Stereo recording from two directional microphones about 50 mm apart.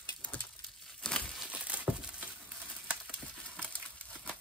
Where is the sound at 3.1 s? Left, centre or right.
Left.